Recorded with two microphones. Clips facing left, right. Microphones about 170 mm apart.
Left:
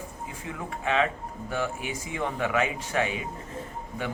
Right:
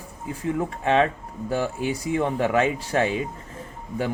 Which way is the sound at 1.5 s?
35° right (ahead or behind).